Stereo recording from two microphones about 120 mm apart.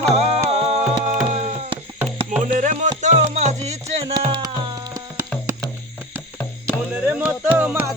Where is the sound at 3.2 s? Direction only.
65° right (ahead or behind).